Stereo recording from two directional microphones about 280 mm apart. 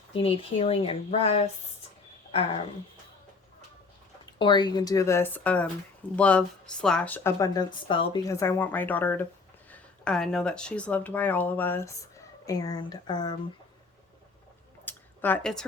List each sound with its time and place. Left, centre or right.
0.1 s speech: left
4.4 s a woman's voice: centre
14.8 s a sound: centre